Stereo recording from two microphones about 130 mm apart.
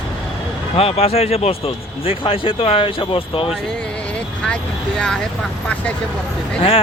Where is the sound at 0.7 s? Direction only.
50° left (ahead or behind).